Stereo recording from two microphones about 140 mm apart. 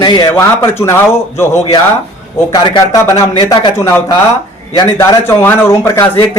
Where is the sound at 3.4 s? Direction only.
25° left (ahead or behind).